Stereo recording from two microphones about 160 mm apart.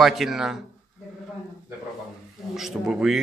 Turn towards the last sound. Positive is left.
turn(degrees=-5)  # may be behind; listen again after turning